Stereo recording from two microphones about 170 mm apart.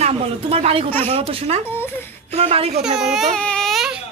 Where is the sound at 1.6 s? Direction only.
15° left (ahead or behind).